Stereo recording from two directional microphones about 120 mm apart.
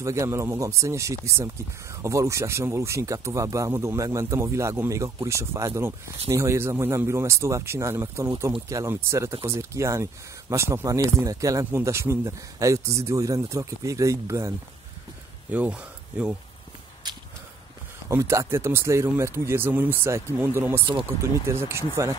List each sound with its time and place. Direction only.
0.0 s speech: 25° right (ahead or behind)
15.5 s speech: 10° right (ahead or behind)
17.0 s walk: 35° right (ahead or behind)
18.0 s speech: 20° right (ahead or behind)